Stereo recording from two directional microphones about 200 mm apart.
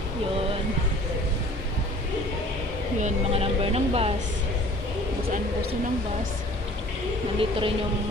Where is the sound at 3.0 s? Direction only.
35° right (ahead or behind).